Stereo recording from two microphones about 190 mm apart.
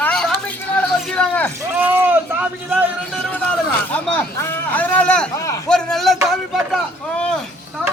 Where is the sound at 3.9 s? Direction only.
10° left (ahead or behind).